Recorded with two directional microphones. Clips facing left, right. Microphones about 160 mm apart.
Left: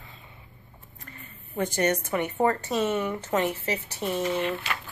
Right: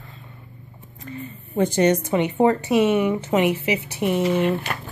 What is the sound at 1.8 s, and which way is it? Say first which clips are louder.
A woman's voice: right 6 dB; 20° right (ahead or behind).